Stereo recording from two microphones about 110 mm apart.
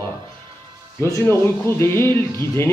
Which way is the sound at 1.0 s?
25° left (ahead or behind).